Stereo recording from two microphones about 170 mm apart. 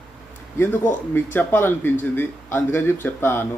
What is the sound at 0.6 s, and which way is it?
A man's voice, 10° left (ahead or behind).